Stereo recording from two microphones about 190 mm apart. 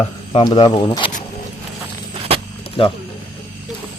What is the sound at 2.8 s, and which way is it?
Speech, 30° left (ahead or behind).